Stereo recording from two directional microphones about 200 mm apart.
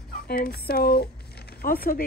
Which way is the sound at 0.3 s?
50° left (ahead or behind).